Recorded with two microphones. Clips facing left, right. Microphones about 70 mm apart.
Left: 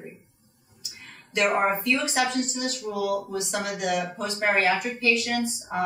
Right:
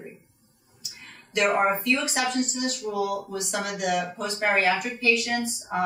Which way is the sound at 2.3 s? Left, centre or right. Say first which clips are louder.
Right 1 dB; left.